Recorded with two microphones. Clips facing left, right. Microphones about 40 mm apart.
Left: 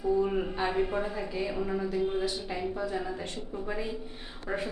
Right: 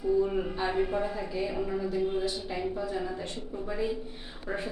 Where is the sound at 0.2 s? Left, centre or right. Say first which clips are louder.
Even; centre.